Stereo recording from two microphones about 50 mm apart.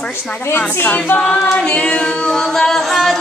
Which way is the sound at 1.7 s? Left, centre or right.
Left.